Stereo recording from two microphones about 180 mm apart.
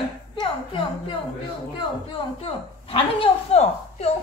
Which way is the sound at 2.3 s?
30° left (ahead or behind).